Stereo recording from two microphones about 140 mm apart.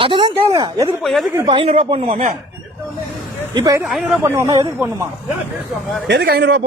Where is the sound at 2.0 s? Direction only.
60° right (ahead or behind).